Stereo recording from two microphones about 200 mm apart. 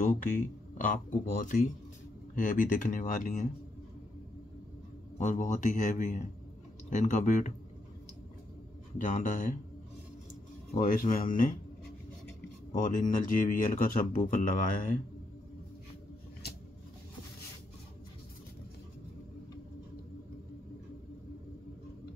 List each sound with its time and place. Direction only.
0.7 s speech: 40° left (ahead or behind)
5.2 s speech: 40° left (ahead or behind)
8.9 s speech: 40° left (ahead or behind)
10.7 s speech: 40° left (ahead or behind)
12.7 s speech: 40° left (ahead or behind)